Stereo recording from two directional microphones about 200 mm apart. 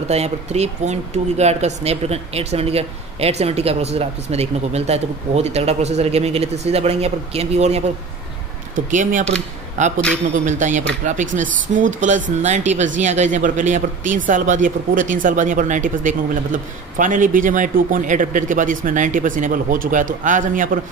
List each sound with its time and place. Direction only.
0.1 s speech: 30° right (ahead or behind)
8.9 s speech: 40° right (ahead or behind)